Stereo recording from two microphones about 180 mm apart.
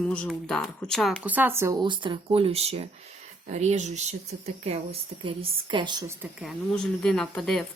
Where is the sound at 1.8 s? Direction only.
25° right (ahead or behind).